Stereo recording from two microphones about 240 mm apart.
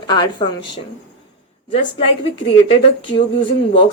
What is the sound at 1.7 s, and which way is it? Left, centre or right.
Speech, left.